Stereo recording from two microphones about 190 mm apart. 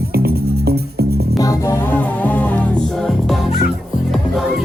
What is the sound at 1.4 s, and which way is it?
Music, 15° left (ahead or behind).